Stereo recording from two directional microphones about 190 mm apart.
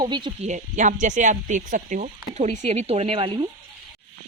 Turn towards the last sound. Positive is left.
turn(degrees=-30)  # may be behind; listen again after turning